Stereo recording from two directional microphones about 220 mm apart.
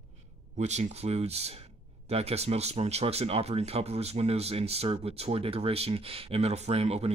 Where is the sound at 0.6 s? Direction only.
30° right (ahead or behind).